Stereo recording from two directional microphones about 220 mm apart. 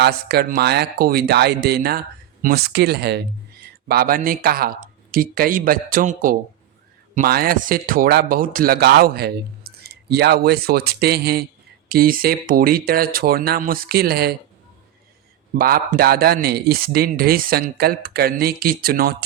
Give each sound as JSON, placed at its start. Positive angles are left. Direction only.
{"t": 0.0, "sound": "speech", "side_deg": -45}
{"t": 15.5, "sound": "speech", "side_deg": -40}